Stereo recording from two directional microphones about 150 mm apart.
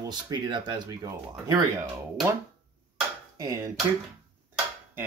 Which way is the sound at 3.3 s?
25° right (ahead or behind).